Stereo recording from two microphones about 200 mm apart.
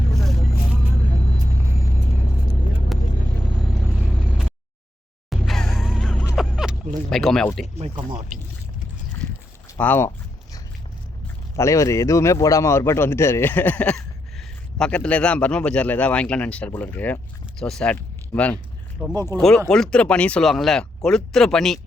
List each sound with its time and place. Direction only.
5.3 s gasp: centre (ahead or behind)
6.3 s a sound: centre (ahead or behind)
7.8 s speech: 25° right (ahead or behind)
9.2 s a sound: 5° left (ahead or behind)
9.7 s a man's voice: 10° left (ahead or behind)
11.5 s a man's voice: 15° left (ahead or behind)
19.0 s speech: 10° right (ahead or behind)
19.4 s speech: 5° left (ahead or behind)